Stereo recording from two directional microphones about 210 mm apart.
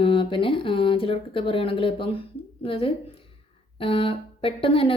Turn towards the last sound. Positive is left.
turn(degrees=25)  # may be behind; listen again after turning